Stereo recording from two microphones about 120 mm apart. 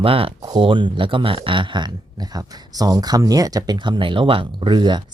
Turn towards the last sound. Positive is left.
turn(degrees=-40)  # may be behind; listen again after turning